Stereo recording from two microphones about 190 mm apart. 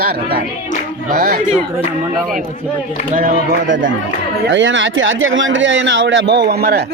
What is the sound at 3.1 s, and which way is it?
Speech, 45° right (ahead or behind).